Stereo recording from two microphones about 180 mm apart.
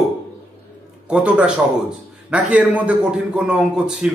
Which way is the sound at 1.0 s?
5° right (ahead or behind).